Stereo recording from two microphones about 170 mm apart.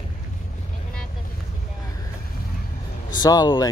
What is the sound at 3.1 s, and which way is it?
Speech, 25° left (ahead or behind).